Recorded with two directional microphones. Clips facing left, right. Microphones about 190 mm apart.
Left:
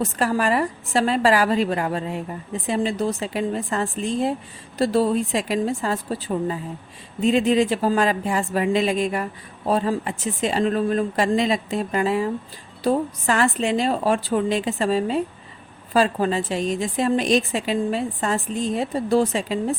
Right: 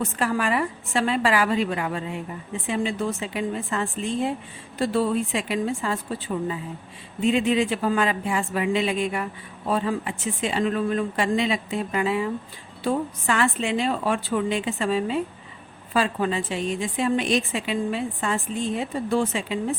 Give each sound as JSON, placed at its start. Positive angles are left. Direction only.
{"t": 0.0, "sound": "a woman's voice", "side_deg": 40}